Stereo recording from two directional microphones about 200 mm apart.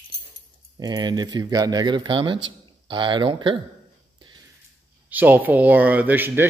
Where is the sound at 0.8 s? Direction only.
20° right (ahead or behind).